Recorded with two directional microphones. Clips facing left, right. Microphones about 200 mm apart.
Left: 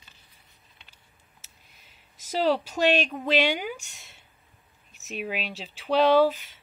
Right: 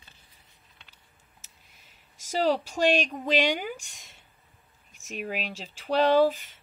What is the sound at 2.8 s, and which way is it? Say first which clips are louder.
Speech: even; 10° right (ahead or behind).